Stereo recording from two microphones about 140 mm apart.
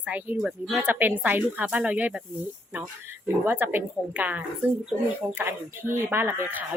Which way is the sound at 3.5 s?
15° right (ahead or behind).